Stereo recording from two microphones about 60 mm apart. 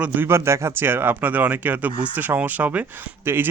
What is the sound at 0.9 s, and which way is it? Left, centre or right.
Speech, right.